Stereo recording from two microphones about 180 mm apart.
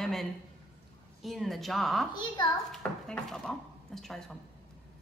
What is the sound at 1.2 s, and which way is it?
Speech, centre (ahead or behind).